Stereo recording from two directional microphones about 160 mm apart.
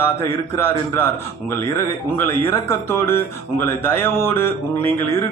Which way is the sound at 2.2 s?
15° left (ahead or behind).